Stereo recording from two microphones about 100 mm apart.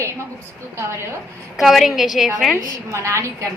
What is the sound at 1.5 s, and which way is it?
Speech, centre (ahead or behind).